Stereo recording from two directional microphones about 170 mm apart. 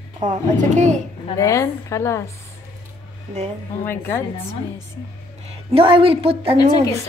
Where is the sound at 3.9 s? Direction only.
15° left (ahead or behind).